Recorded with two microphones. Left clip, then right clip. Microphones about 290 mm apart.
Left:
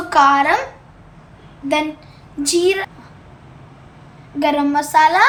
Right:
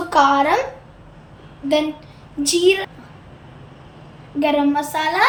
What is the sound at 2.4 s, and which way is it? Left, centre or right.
Speech, centre.